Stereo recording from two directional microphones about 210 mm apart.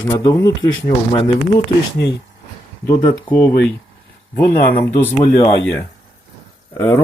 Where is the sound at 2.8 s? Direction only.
10° left (ahead or behind).